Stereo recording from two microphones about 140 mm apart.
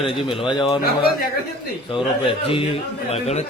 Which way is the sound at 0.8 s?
90° left.